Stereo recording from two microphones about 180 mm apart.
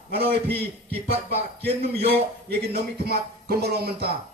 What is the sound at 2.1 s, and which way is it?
Speech, 60° right (ahead or behind).